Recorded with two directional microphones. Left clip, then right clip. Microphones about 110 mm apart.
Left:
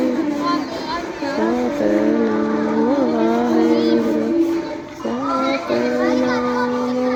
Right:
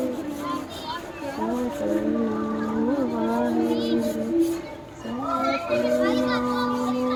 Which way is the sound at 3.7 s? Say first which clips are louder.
Left 8 dB; 20° right (ahead or behind).